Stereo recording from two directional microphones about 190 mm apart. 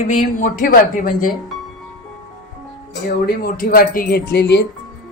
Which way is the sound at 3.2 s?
50° left (ahead or behind).